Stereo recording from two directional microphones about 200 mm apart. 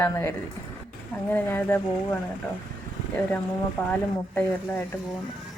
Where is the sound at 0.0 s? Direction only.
10° left (ahead or behind).